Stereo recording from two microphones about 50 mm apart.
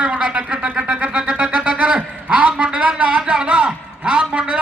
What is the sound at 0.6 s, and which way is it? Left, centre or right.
Music, right.